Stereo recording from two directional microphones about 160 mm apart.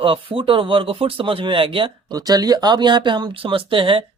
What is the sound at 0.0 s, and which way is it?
Speech, 35° right (ahead or behind).